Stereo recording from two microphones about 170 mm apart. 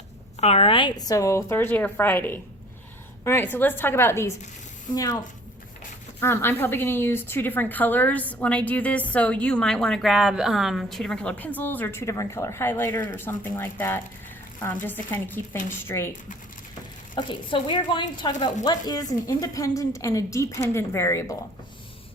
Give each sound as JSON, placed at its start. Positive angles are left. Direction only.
{"t": 0.3, "sound": "a woman's voice", "side_deg": 40}
{"t": 6.1, "sound": "a woman's voice", "side_deg": 15}
{"t": 17.2, "sound": "a woman's voice", "side_deg": 30}